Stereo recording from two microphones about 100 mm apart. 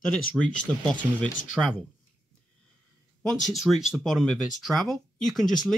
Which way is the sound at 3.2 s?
Centre (ahead or behind).